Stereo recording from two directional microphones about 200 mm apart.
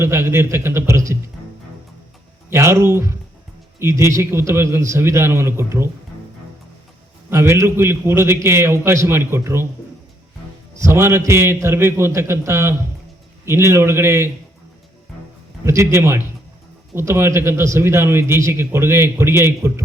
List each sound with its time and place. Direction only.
0.0 s a man's voice: 10° right (ahead or behind)
2.5 s a man's voice: 15° right (ahead or behind)
7.3 s a man's voice: 15° right (ahead or behind)
10.8 s a man's voice: 15° right (ahead or behind)
15.6 s a man's voice: 15° right (ahead or behind)